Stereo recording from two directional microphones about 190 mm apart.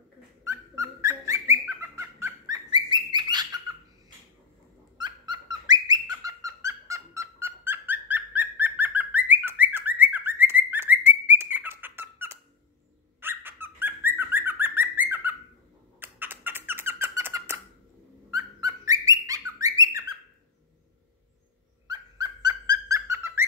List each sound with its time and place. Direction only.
0.4 s bird: 15° right (ahead or behind)
4.9 s bird: 25° right (ahead or behind)
16.0 s a sound: 10° right (ahead or behind)
18.3 s bird: 20° right (ahead or behind)
21.8 s dog: 20° right (ahead or behind)